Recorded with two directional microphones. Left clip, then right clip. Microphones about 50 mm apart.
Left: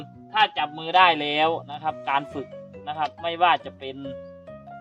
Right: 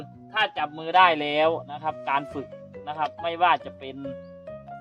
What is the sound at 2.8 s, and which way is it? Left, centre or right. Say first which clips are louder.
Speech: left 1 dB; right.